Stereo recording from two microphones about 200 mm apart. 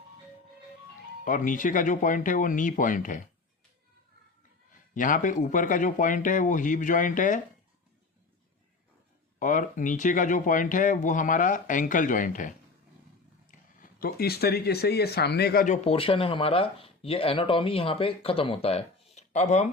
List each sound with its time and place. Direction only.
1.2 s speech: 40° left (ahead or behind)
4.9 s speech: 40° left (ahead or behind)
9.4 s speech: 40° left (ahead or behind)
15.6 s speech: 35° left (ahead or behind)